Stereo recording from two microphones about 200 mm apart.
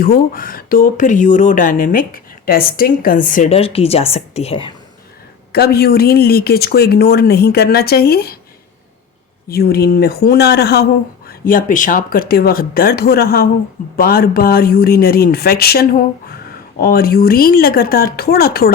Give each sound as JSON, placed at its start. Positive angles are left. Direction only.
{"t": 0.0, "sound": "speech", "side_deg": 45}
{"t": 5.5, "sound": "speech", "side_deg": 50}
{"t": 9.5, "sound": "speech", "side_deg": 50}